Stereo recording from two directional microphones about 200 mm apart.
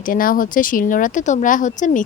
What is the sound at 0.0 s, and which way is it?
Speech, 45° left (ahead or behind).